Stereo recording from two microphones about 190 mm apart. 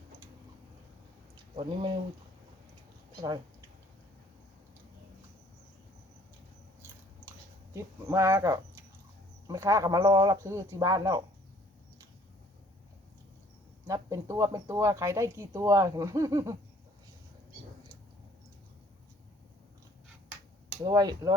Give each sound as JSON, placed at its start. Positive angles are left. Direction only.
{"t": 1.5, "sound": "speech", "side_deg": -25}
{"t": 3.2, "sound": "speech", "side_deg": -20}
{"t": 7.7, "sound": "speech", "side_deg": -15}
{"t": 13.8, "sound": "speech", "side_deg": -15}
{"t": 20.8, "sound": "speech", "side_deg": -20}